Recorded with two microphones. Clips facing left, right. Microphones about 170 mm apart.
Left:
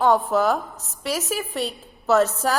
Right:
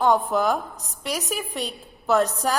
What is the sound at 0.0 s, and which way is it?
A woman's voice, centre (ahead or behind).